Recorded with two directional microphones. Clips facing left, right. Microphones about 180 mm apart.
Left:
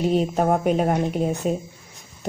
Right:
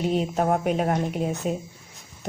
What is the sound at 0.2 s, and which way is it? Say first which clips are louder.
Speech: left 3 dB; 35° left (ahead or behind).